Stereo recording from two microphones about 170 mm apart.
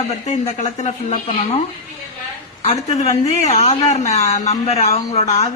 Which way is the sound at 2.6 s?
40° left (ahead or behind).